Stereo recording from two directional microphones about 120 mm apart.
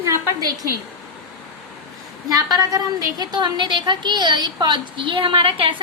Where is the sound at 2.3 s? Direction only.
30° right (ahead or behind).